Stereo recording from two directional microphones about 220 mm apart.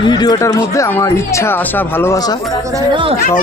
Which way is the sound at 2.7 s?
20° right (ahead or behind).